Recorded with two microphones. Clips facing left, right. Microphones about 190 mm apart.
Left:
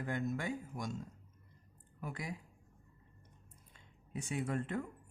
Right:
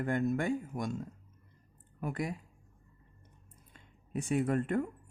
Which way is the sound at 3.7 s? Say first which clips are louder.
Right 7 dB; 50° right (ahead or behind).